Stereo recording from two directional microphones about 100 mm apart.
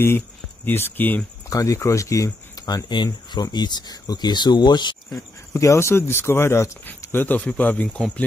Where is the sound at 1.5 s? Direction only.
35° left (ahead or behind).